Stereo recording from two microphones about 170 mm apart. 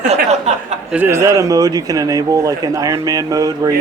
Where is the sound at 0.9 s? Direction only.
10° right (ahead or behind).